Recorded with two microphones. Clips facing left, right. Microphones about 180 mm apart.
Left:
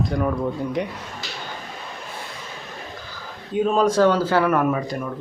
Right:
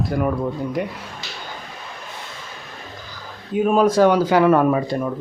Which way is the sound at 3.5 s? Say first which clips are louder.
Right 2 dB; 10° right (ahead or behind).